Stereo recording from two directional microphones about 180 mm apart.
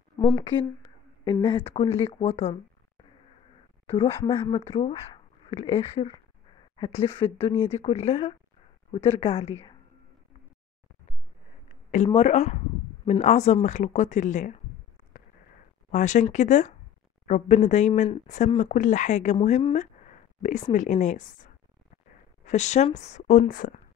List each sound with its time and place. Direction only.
1.4 s speech: 30° left (ahead or behind)
3.9 s speech: 30° left (ahead or behind)
12.1 s speech: 35° left (ahead or behind)
15.9 s a woman's voice: 40° left (ahead or behind)
22.4 s speech: 40° left (ahead or behind)